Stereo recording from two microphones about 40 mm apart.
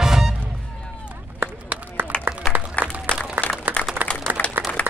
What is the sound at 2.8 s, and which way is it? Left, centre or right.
Applause, left.